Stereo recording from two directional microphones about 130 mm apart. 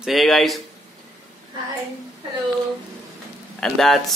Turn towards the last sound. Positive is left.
turn(degrees=0)  # may be behind; listen again after turning